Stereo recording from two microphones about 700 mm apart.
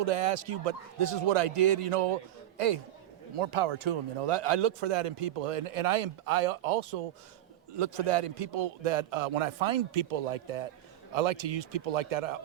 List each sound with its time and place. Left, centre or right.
0.0 s speech: right